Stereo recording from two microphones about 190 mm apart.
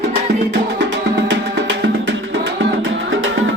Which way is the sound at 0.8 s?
75° right (ahead or behind).